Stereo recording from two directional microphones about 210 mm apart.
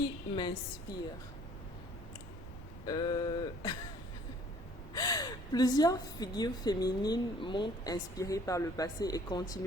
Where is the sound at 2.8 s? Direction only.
20° left (ahead or behind).